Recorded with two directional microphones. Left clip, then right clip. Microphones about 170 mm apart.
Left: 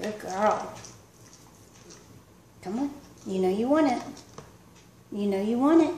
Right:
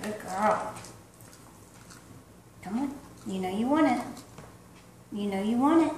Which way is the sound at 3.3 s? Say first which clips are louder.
Left 4 dB; 50° left (ahead or behind).